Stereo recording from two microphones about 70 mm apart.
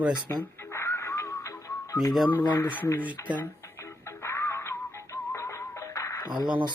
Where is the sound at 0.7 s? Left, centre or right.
Left.